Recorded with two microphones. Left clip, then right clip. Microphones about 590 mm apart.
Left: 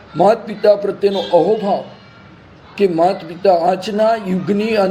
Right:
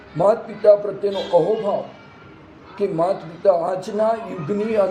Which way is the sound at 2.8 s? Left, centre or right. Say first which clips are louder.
Left 6 dB; left.